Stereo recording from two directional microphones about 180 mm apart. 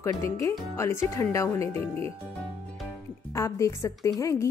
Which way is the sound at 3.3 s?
15° left (ahead or behind).